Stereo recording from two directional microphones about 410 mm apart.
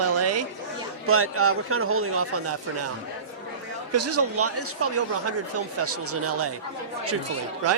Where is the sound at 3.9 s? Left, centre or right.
Right.